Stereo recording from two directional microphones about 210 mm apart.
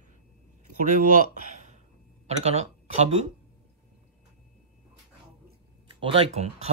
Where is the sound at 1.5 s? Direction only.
35° right (ahead or behind).